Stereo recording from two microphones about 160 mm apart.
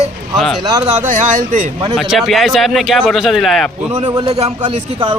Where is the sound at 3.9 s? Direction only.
25° right (ahead or behind).